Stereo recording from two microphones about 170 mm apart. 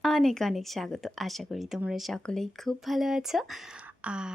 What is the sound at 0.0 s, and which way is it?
A woman's voice, 5° left (ahead or behind).